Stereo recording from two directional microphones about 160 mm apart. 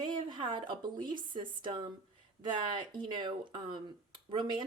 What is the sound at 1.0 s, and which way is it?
Speech, 30° right (ahead or behind).